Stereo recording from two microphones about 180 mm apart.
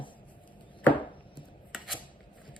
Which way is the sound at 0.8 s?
10° left (ahead or behind).